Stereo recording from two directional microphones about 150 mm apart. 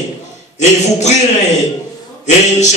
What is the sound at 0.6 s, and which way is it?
Speech, 50° left (ahead or behind).